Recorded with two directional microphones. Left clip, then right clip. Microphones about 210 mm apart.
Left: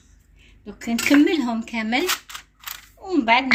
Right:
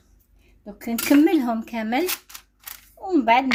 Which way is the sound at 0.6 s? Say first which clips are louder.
Left 2 dB; 40° right (ahead or behind).